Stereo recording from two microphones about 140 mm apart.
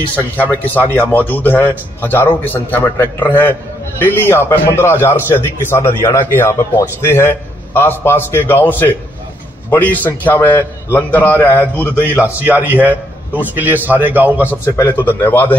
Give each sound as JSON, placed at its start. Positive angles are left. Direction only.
{"t": 0.1, "sound": "a man's voice", "side_deg": 10}
{"t": 11.9, "sound": "a man's voice", "side_deg": -15}
{"t": 15.0, "sound": "a man's voice", "side_deg": 15}